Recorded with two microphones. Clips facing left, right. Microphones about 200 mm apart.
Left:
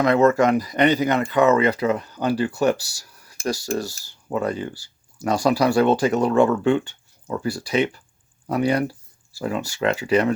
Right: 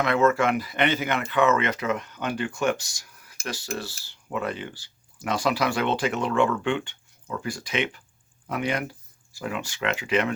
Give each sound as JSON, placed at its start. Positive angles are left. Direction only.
{"t": 0.0, "sound": "speech", "side_deg": 40}